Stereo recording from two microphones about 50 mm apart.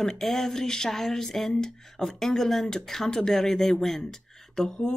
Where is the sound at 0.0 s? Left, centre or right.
Centre.